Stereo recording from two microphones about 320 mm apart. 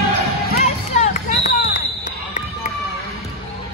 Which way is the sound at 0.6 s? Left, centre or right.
Left.